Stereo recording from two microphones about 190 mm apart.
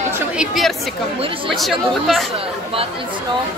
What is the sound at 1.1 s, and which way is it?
Speech, 30° right (ahead or behind).